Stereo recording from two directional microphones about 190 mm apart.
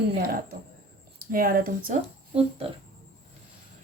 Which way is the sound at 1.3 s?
50° right (ahead or behind).